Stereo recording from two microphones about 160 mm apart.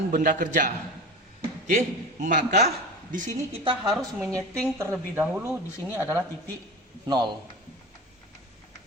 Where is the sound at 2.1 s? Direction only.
50° right (ahead or behind).